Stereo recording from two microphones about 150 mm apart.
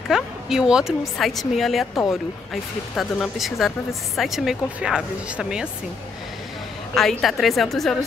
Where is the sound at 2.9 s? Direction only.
Centre (ahead or behind).